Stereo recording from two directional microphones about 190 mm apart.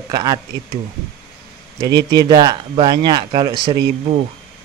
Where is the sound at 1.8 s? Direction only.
20° right (ahead or behind).